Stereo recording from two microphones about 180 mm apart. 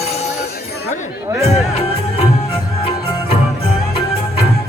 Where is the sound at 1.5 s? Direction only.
35° left (ahead or behind).